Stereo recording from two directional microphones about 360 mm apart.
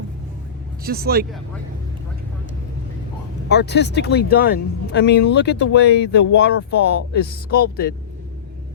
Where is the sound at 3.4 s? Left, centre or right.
Left.